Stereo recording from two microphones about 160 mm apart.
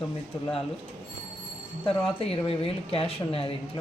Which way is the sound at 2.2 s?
35° left (ahead or behind).